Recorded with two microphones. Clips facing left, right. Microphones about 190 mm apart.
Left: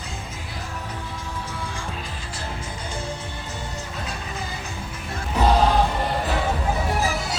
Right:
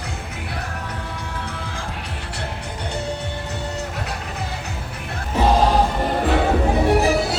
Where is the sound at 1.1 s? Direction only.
65° right (ahead or behind).